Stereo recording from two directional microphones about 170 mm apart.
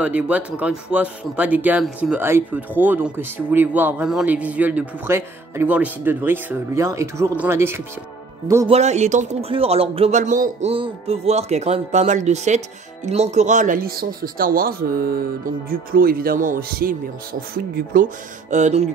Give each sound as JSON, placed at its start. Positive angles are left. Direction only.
{"t": 0.0, "sound": "speech", "side_deg": -10}
{"t": 8.6, "sound": "speech", "side_deg": -40}
{"t": 10.7, "sound": "speech", "side_deg": -35}